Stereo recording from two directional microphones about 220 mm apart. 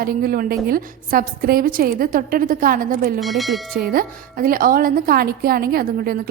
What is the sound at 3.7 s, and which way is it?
A woman's voice, 40° right (ahead or behind).